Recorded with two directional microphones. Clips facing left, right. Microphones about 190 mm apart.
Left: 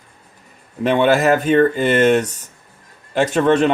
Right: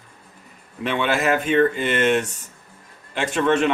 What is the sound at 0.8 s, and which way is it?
Speech, 40° left (ahead or behind).